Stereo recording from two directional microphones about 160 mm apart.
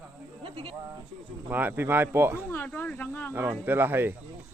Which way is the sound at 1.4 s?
10° right (ahead or behind).